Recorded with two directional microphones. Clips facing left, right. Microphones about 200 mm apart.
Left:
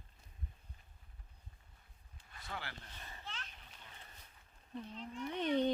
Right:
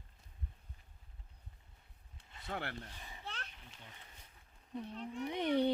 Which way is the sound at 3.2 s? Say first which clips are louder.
Right 4 dB; 60° right (ahead or behind).